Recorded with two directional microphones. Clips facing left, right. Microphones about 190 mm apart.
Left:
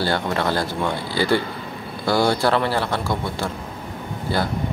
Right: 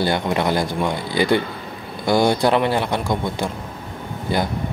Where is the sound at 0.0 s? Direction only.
15° right (ahead or behind).